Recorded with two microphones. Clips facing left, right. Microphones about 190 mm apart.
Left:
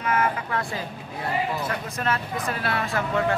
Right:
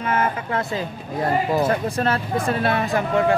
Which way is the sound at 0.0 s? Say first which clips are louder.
Right 2 dB; 30° right (ahead or behind).